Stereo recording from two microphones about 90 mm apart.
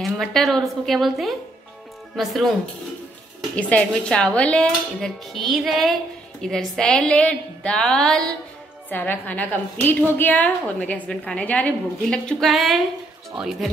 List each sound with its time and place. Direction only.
0.0 s a woman's voice: centre (ahead or behind)
3.5 s a woman's voice: 15° left (ahead or behind)
8.9 s a woman's voice: 20° left (ahead or behind); by 13.7 s 5° right (ahead or behind)